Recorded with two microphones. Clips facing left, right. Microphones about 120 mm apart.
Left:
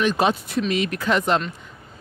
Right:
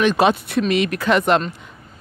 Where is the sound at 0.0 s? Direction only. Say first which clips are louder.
Right 4 dB; 75° right (ahead or behind).